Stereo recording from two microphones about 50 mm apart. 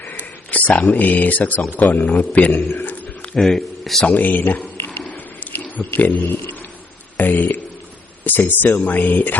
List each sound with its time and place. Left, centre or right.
0.0 s speech: left
3.4 s a man's voice: centre
4.1 s speech: left
4.9 s a sound: left
6.0 s speech: left
7.2 s a sound: left
8.2 s speech: left